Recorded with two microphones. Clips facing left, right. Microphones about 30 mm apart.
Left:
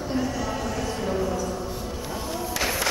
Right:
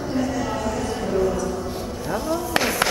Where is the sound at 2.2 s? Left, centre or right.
Right.